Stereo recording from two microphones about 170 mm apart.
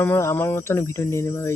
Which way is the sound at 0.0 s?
15° left (ahead or behind).